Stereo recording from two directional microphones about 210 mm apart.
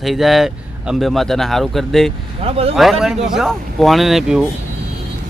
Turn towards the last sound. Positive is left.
turn(degrees=0)  # may be behind; listen again after turning